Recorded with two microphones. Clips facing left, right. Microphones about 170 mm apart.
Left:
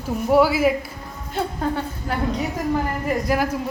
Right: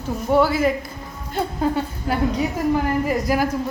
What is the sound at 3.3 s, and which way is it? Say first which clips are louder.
Speech: even; 5° right (ahead or behind).